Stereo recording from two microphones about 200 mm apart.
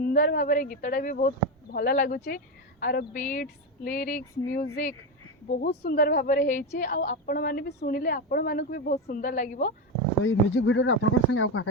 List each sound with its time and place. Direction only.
0.0 s a woman's voice: 45° left (ahead or behind)
10.2 s speech: 75° left (ahead or behind)